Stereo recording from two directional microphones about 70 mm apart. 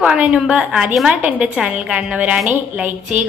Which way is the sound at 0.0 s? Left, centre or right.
Centre.